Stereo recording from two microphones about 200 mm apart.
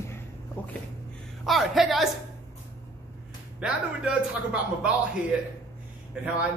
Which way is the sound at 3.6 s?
5° right (ahead or behind).